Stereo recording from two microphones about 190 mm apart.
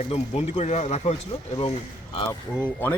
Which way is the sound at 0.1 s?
35° left (ahead or behind).